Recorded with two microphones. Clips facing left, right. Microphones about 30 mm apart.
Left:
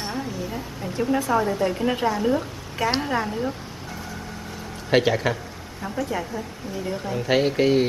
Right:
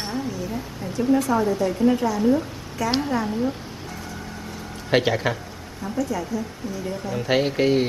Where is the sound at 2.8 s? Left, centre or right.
Left.